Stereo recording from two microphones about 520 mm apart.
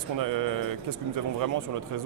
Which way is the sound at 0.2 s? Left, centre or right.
Right.